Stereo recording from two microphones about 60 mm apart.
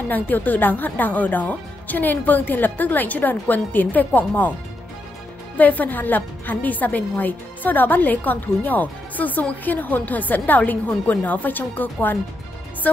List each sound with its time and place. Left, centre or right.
0.1 s a woman's voice: left
5.6 s a woman's voice: left